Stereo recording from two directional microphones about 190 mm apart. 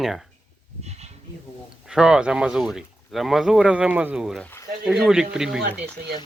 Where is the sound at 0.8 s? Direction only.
35° right (ahead or behind).